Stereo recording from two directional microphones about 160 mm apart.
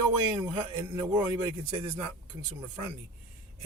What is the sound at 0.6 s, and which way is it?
Speech, 25° right (ahead or behind).